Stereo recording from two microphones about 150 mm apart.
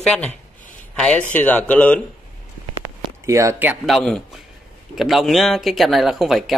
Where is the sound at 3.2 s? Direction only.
20° right (ahead or behind).